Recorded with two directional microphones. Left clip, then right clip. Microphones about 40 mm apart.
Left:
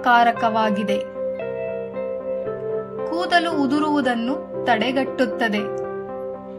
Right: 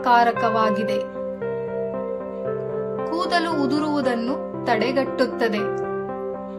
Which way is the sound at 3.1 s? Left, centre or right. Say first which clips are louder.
Left 3 dB; left.